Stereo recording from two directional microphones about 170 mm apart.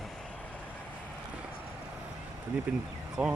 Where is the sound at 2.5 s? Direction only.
10° right (ahead or behind).